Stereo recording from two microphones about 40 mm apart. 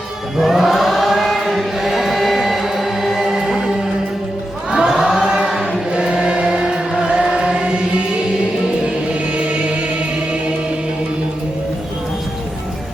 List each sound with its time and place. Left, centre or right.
0.3 s chant: centre
4.7 s chant: centre
5.5 s choir: centre
5.9 s choir: centre
9.5 s music: right